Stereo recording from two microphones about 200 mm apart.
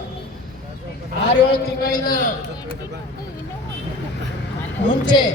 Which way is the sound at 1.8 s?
45° left (ahead or behind).